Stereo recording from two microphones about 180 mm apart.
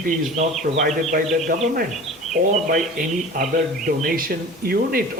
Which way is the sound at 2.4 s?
60° right (ahead or behind).